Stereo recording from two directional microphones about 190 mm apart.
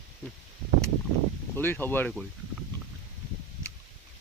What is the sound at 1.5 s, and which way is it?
Speech, 10° left (ahead or behind).